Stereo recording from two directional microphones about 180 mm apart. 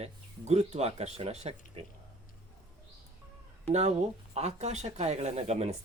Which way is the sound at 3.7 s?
40° right (ahead or behind).